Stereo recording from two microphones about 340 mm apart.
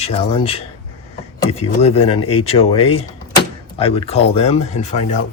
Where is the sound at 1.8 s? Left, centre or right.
Centre.